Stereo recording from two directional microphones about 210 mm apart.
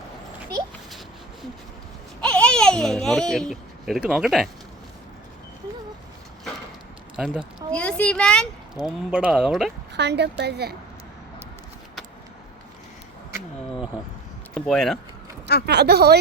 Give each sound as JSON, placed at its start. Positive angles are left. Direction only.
{"t": 0.9, "sound": "a sound", "side_deg": 0}
{"t": 2.2, "sound": "babbling", "side_deg": 5}
{"t": 7.2, "sound": "speech", "side_deg": 0}
{"t": 9.9, "sound": "a woman's voice", "side_deg": -55}
{"t": 14.5, "sound": "speech", "side_deg": 0}
{"t": 15.6, "sound": "a woman's voice", "side_deg": -50}